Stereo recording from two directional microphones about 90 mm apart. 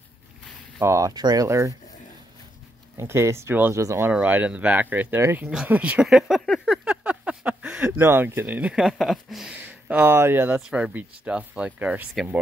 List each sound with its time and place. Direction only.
0.7 s speech: 35° right (ahead or behind)
3.0 s speech: 30° right (ahead or behind)
4.1 s speech: 15° right (ahead or behind)
5.4 s speech: 5° right (ahead or behind)
6.0 s speech: 5° right (ahead or behind)
6.4 s a sound: 10° left (ahead or behind)
6.9 s a sound: 15° right (ahead or behind)
7.9 s speech: 25° right (ahead or behind); by 9.5 s centre (ahead or behind)
9.5 s speech: 20° right (ahead or behind)
10.5 s speech: 10° right (ahead or behind)